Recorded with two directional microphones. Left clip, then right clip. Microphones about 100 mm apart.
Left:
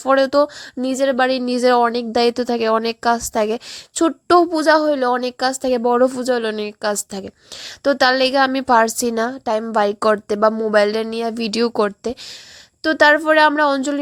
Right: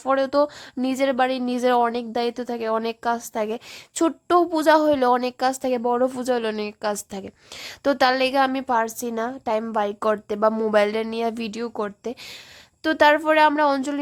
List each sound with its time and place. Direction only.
0.0 s a woman's voice: 25° left (ahead or behind)
0.8 s speech: 10° left (ahead or behind)
1.1 s a woman's voice: 25° left (ahead or behind)
4.0 s speech: 15° left (ahead or behind)
5.2 s a woman's voice: 20° left (ahead or behind)
8.5 s a woman's voice: 40° left (ahead or behind)
9.4 s a woman's voice: 25° left (ahead or behind)
9.7 s a woman's voice: 35° left (ahead or behind); by 11.4 s 20° left (ahead or behind)
11.5 s speech: 55° left (ahead or behind)
12.8 s a woman's voice: 20° left (ahead or behind)